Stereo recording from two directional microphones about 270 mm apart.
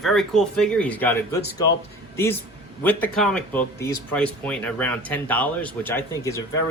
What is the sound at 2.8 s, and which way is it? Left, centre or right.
Speech, centre.